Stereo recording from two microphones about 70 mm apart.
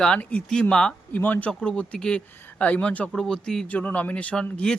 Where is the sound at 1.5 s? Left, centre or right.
Centre.